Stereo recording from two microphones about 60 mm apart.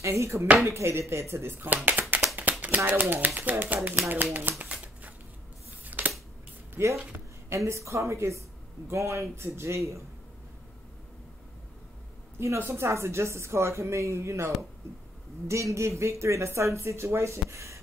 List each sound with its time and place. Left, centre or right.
0.0 s speech: right
1.7 s speech: right
4.6 s shuffling cards: right
5.9 s scissors: right
6.7 s a sound: right
7.1 s speech: right
12.4 s speech: right